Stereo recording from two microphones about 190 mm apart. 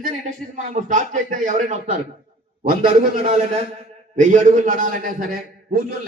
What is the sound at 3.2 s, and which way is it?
A man's voice, 35° right (ahead or behind).